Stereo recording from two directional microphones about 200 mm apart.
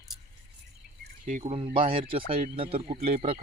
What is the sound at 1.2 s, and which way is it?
Speech, 40° right (ahead or behind).